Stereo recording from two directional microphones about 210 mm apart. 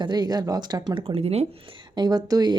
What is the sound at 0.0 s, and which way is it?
Speech, 20° right (ahead or behind).